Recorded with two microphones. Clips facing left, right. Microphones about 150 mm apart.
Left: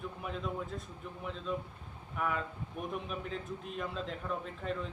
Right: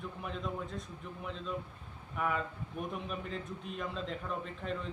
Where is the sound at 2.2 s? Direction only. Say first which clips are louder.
Right 1 dB; centre (ahead or behind).